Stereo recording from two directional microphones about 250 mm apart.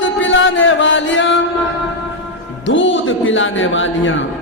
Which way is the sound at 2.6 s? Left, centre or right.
Left.